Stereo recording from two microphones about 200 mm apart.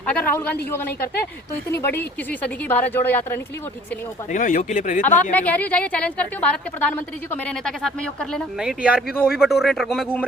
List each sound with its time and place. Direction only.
0.0 s a sound: 10° left (ahead or behind)
1.7 s a woman's voice: 10° left (ahead or behind)
4.3 s a man's voice: 40° left (ahead or behind)
5.3 s a woman's voice: 5° left (ahead or behind)